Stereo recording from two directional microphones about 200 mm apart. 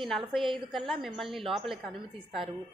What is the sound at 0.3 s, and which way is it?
A woman's voice, centre (ahead or behind).